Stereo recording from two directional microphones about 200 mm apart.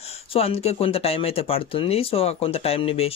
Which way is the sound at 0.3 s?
30° left (ahead or behind).